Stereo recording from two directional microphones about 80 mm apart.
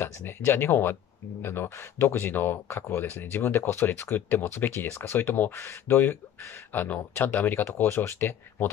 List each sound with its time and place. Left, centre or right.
0.0 s speech: left